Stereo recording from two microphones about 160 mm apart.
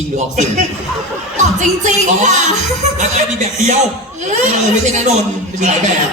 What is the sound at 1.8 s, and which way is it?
Speech, 50° right (ahead or behind).